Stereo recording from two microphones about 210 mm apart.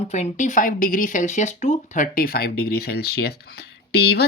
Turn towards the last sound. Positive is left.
turn(degrees=50)  # may be behind; listen again after turning